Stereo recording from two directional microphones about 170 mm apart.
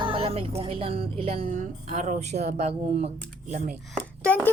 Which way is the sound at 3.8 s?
5° left (ahead or behind).